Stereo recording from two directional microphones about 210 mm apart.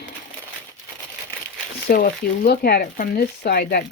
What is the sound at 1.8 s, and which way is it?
Speech, 45° left (ahead or behind).